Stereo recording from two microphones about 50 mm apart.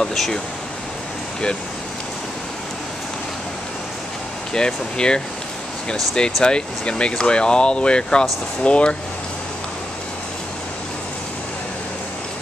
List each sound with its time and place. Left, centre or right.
0.0 s speech: centre
4.6 s speech: centre